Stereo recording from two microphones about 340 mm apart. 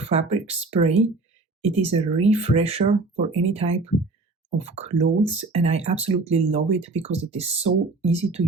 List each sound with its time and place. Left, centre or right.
0.0 s speech: centre